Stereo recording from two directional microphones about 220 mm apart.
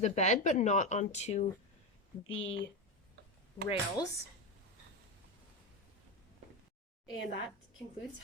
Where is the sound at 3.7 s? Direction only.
15° left (ahead or behind).